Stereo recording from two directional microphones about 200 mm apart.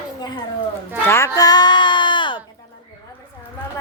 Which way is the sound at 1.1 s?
15° left (ahead or behind).